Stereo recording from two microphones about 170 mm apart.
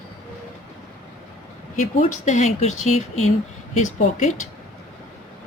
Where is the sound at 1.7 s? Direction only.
45° left (ahead or behind).